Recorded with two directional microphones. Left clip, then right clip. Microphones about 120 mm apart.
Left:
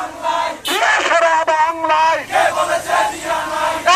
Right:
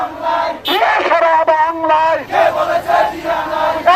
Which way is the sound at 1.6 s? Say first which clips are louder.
Right 1 dB; 35° right (ahead or behind).